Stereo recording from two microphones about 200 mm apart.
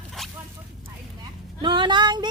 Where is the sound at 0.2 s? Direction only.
Centre (ahead or behind).